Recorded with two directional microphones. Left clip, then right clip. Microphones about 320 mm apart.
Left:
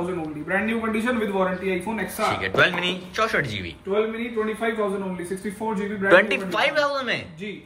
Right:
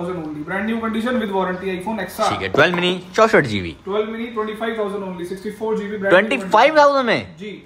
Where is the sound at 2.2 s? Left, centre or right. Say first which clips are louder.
Right 4 dB; centre.